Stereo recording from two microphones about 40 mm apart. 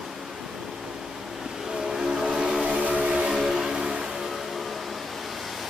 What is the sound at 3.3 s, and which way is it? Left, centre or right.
Vehicle, centre.